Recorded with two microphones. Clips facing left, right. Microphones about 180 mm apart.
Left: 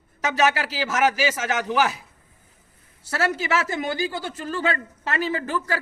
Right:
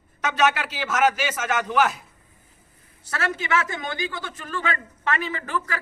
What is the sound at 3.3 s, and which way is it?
A man's voice, 35° left (ahead or behind).